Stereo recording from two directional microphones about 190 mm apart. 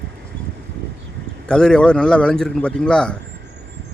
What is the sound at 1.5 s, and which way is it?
A man's voice, 5° left (ahead or behind).